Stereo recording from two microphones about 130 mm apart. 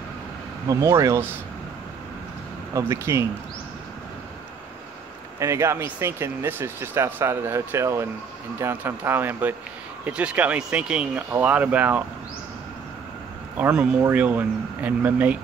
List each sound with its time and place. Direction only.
0.7 s speech: 25° right (ahead or behind)
2.7 s speech: 20° right (ahead or behind)
5.4 s speech: 20° right (ahead or behind)
13.6 s speech: 10° right (ahead or behind)